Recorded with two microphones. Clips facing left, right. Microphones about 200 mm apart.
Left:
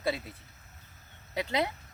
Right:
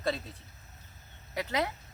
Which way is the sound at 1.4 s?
15° left (ahead or behind).